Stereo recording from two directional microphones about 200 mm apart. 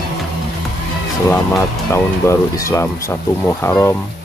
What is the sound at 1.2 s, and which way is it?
Speech, 15° left (ahead or behind).